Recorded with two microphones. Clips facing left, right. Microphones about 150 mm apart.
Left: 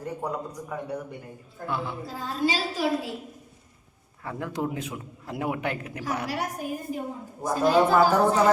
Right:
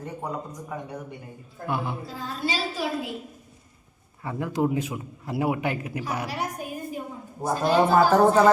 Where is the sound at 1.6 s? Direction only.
15° right (ahead or behind).